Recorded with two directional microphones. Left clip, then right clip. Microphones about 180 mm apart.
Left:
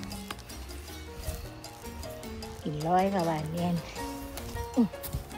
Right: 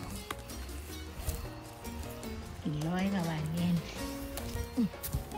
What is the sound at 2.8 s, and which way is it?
Speech, 20° left (ahead or behind).